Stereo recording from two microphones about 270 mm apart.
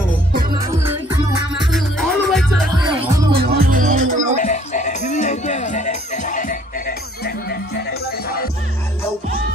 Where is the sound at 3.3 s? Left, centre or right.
Right.